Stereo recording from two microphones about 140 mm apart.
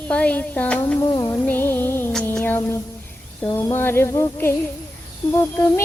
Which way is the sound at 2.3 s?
15° left (ahead or behind).